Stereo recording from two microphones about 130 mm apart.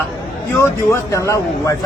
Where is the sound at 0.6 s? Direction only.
20° left (ahead or behind).